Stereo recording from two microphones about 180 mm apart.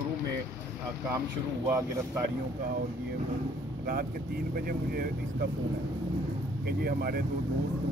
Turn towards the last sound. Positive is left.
turn(degrees=-60)  # may be behind; listen again after turning